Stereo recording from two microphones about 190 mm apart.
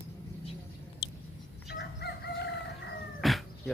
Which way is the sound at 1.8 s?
65° left (ahead or behind).